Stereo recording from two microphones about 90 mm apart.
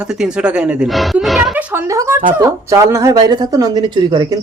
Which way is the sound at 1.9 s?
35° right (ahead or behind).